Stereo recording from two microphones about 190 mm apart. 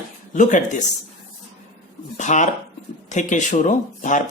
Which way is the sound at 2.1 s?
40° left (ahead or behind).